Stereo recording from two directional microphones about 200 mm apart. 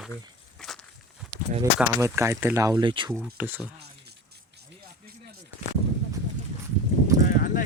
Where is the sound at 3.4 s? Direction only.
10° right (ahead or behind).